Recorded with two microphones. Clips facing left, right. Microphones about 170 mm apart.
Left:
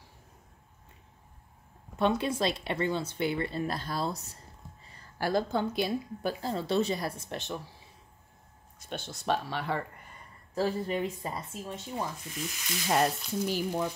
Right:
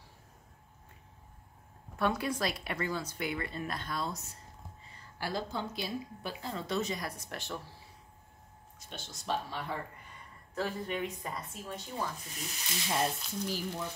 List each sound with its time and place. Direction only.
2.0 s speech: 25° left (ahead or behind)
5.2 s a woman's voice: 55° left (ahead or behind)
6.4 s speech: 30° left (ahead or behind)
8.7 s a woman's voice: 60° left (ahead or behind)
10.5 s speech: 35° left (ahead or behind)
12.9 s speech: 70° left (ahead or behind)